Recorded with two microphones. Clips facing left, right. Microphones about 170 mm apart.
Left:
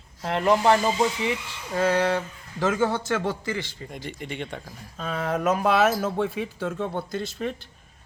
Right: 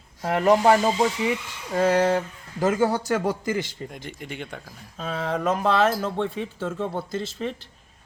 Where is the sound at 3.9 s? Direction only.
Centre (ahead or behind).